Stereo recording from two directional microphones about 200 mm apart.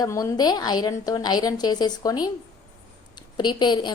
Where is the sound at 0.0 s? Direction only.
20° left (ahead or behind).